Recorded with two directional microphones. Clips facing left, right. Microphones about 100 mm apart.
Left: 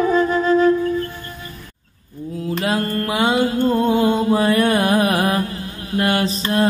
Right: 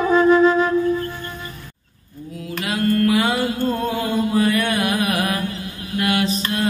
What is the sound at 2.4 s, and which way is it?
Mantra, 35° left (ahead or behind).